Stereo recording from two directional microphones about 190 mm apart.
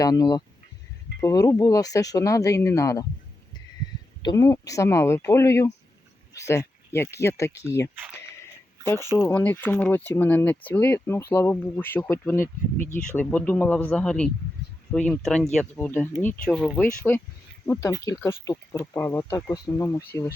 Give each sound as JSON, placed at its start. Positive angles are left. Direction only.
{"t": 0.0, "sound": "speech", "side_deg": 20}
{"t": 4.2, "sound": "speech", "side_deg": 20}
{"t": 8.8, "sound": "speech", "side_deg": 15}